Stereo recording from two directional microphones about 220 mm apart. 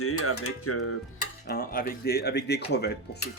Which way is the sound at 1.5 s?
40° left (ahead or behind).